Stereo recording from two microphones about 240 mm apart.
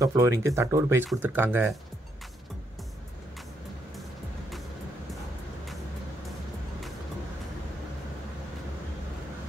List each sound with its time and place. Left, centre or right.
0.0 s speech: centre